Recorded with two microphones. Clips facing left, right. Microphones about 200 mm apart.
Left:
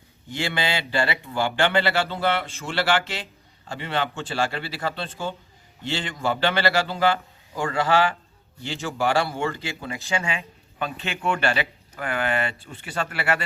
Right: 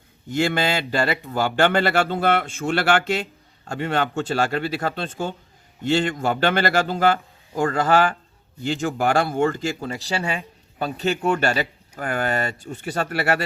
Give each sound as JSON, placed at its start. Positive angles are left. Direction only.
{"t": 0.3, "sound": "speech", "side_deg": -45}